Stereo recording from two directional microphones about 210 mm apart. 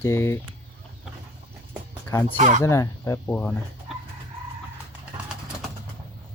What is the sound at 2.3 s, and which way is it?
Speech, 35° right (ahead or behind).